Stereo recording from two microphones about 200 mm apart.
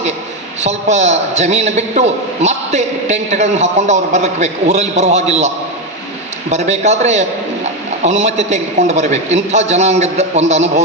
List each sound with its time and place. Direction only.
0.6 s a man's voice: 35° right (ahead or behind)
6.5 s a man's voice: 35° right (ahead or behind)